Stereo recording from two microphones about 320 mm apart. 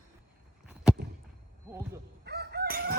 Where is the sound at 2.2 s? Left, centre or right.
Right.